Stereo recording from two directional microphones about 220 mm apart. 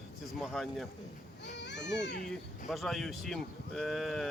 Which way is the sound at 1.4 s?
55° left (ahead or behind).